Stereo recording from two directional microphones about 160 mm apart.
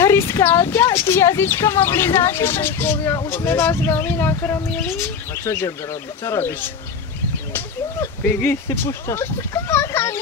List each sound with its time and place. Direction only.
0.0 s speech: 15° left (ahead or behind)